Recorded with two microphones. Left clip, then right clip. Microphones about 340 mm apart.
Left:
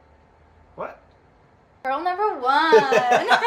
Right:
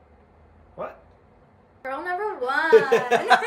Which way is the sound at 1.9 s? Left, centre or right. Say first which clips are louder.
Left 5 dB; centre.